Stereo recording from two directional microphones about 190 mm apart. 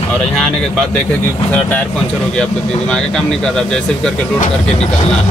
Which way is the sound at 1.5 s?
5° left (ahead or behind).